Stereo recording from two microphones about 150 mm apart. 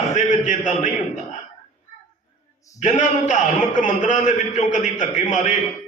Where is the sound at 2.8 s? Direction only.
55° left (ahead or behind).